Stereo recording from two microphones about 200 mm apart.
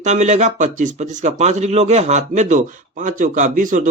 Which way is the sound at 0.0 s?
35° right (ahead or behind).